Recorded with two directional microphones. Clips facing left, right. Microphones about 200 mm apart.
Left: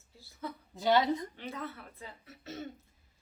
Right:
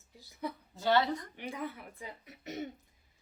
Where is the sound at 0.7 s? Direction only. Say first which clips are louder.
Left 2 dB; 15° left (ahead or behind).